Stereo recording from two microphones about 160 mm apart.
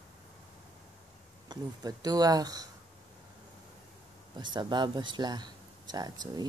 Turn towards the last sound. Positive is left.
turn(degrees=-25)  # may be behind; listen again after turning